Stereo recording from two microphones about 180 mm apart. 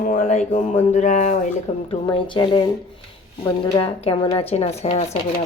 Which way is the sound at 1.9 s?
30° left (ahead or behind).